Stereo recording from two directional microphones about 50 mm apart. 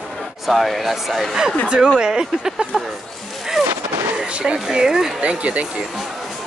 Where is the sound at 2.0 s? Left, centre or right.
Centre.